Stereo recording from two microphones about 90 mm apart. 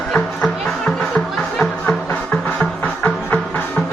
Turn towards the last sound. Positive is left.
turn(degrees=20)  # may be behind; listen again after turning